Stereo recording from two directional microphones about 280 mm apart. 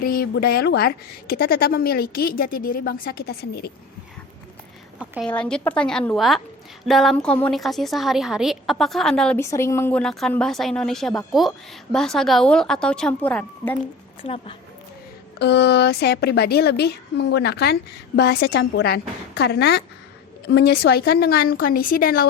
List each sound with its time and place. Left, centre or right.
0.0 s a woman's voice: left
4.9 s a woman's voice: centre
14.2 s a woman's voice: centre
15.4 s a woman's voice: left